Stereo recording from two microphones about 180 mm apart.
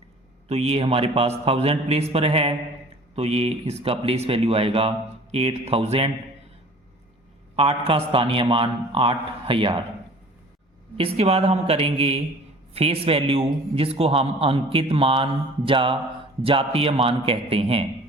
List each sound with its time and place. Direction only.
0.4 s a man's voice: 35° right (ahead or behind)
7.5 s a man's voice: 30° right (ahead or behind)
10.9 s a man's voice: 35° right (ahead or behind)